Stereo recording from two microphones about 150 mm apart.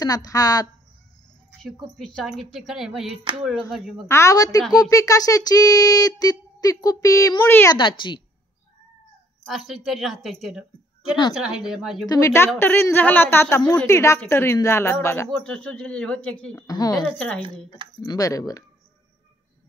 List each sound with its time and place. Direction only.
0.0 s speech: 25° left (ahead or behind)
1.6 s speech: 5° left (ahead or behind)
4.1 s speech: 20° left (ahead or behind)
9.4 s speech: centre (ahead or behind)
12.1 s speech: 20° left (ahead or behind)
16.5 s speech: 25° left (ahead or behind)
16.9 s speech: 5° left (ahead or behind)
18.0 s speech: 25° left (ahead or behind)